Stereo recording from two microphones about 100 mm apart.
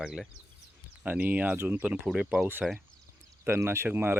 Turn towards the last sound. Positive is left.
turn(degrees=-20)  # may be behind; listen again after turning